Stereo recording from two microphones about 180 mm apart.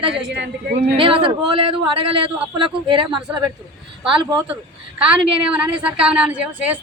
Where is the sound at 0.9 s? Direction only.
30° right (ahead or behind).